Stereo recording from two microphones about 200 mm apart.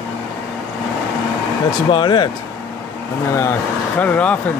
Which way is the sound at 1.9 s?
25° left (ahead or behind).